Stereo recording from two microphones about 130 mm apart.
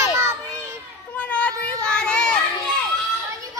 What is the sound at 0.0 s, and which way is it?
Children playing, 20° right (ahead or behind).